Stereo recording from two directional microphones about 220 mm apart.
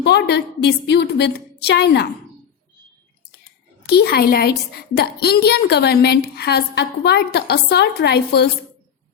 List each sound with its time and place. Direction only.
0.0 s a woman's voice: 50° left (ahead or behind)
3.8 s a woman's voice: 45° left (ahead or behind)